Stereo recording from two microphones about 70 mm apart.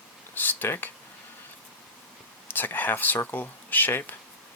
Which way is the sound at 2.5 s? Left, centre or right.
Left.